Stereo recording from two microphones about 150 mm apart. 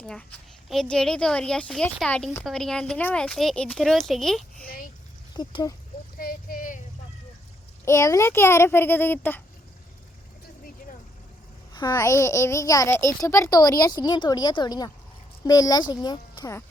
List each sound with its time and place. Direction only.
0.0 s a woman's voice: 10° left (ahead or behind)
4.6 s a child's voice: 80° left
5.4 s a child's voice: 30° left (ahead or behind)
6.1 s speech: 80° left
7.9 s speech: 20° left (ahead or behind)
11.7 s a child's voice: 30° left (ahead or behind)